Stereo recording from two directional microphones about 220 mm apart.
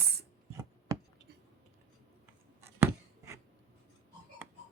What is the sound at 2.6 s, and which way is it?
Writing, 10° right (ahead or behind).